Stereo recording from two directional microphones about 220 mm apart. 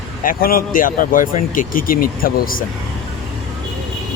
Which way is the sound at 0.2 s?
40° left (ahead or behind).